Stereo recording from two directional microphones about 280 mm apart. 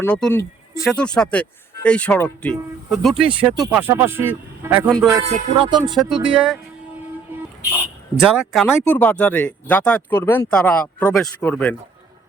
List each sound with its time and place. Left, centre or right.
0.0 s speech: centre
6.0 s speech: centre
8.2 s speech: centre